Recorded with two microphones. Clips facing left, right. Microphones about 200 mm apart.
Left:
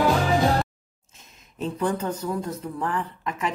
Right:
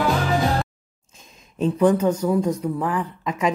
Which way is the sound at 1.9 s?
10° right (ahead or behind).